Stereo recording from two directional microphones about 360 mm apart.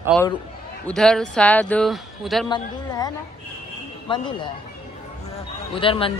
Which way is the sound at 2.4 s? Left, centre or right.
Centre.